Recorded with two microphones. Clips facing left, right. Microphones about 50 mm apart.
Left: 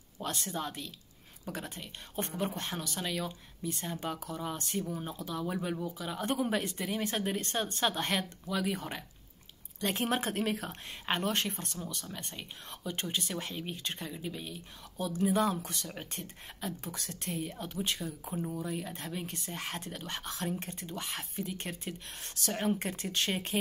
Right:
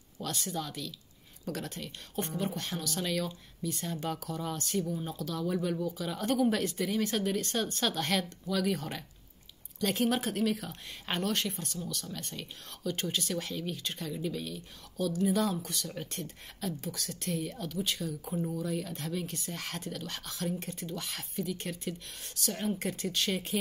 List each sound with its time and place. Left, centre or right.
0.2 s speech: left
2.1 s speech: left
2.9 s speech: centre
4.6 s speech: left
9.8 s speech: left
11.1 s speech: left
18.3 s speech: centre; by 23.6 s left